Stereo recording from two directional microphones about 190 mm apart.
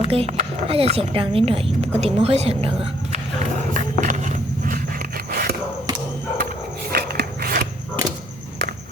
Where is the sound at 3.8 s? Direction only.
40° right (ahead or behind).